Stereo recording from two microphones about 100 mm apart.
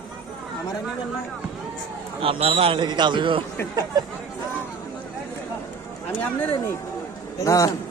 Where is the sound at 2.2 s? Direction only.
80° right.